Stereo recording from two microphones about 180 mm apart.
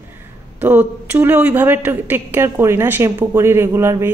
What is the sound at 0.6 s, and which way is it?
A woman's voice, 10° right (ahead or behind).